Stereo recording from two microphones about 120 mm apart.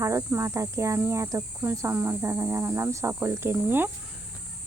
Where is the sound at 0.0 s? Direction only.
25° right (ahead or behind).